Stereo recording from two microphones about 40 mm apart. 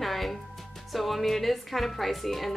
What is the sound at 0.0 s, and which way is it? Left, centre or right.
Music, centre.